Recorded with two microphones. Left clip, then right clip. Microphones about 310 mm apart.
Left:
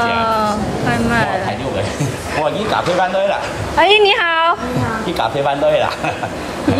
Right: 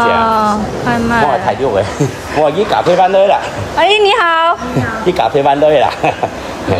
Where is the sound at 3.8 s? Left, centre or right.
Centre.